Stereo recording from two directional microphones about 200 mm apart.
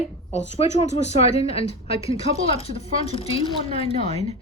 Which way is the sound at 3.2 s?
30° left (ahead or behind).